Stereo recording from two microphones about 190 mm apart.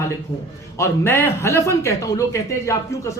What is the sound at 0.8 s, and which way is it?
A man's voice, 15° left (ahead or behind).